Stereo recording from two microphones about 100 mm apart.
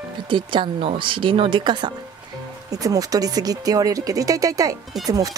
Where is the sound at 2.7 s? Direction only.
35° right (ahead or behind).